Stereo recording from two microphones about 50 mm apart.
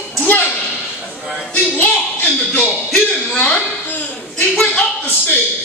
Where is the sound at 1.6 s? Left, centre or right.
Left.